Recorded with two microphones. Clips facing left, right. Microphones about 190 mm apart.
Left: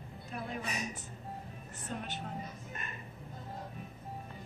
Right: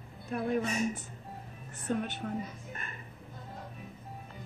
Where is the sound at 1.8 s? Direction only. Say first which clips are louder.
Right 8 dB; 60° right (ahead or behind).